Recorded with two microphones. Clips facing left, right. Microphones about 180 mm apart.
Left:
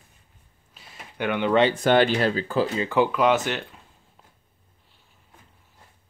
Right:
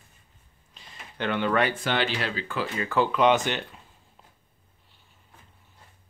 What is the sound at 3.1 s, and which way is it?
Speech, centre (ahead or behind).